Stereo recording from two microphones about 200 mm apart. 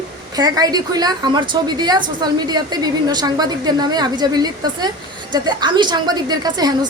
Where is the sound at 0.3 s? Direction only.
20° right (ahead or behind).